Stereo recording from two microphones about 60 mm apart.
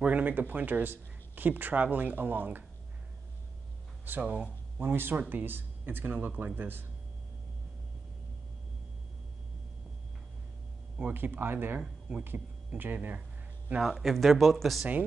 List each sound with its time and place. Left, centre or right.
0.0 s speech: right
4.2 s speech: right
4.7 s speech: right
11.1 s speech: right
13.7 s speech: centre